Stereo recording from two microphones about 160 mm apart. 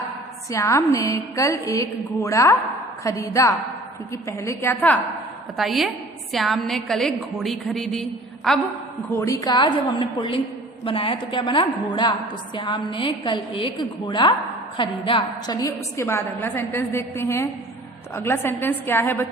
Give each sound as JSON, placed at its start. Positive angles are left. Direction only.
{"t": 0.5, "sound": "a woman's voice", "side_deg": 20}
{"t": 5.5, "sound": "a woman's voice", "side_deg": 0}
{"t": 9.1, "sound": "a woman's voice", "side_deg": 20}
{"t": 15.6, "sound": "a woman's voice", "side_deg": 15}